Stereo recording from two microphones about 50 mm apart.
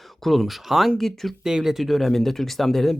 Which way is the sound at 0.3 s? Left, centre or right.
Centre.